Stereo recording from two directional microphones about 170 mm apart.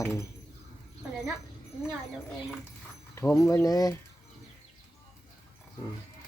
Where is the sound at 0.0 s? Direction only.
15° left (ahead or behind).